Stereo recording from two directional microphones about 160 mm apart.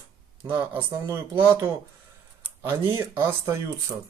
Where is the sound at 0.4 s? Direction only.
15° right (ahead or behind).